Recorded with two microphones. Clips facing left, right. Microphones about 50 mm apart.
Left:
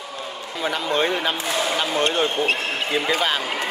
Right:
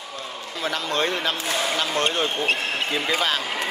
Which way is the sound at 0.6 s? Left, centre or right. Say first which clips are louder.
Left 3 dB; centre.